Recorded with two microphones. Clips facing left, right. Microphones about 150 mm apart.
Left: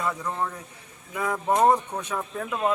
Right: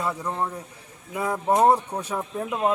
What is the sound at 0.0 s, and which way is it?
Speech, 10° right (ahead or behind).